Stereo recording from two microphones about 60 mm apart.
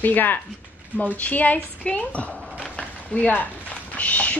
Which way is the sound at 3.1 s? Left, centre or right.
Left.